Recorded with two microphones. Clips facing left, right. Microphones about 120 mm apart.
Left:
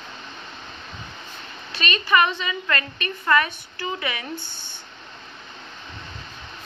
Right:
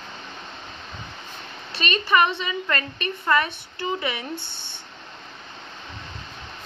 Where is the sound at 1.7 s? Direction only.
30° right (ahead or behind).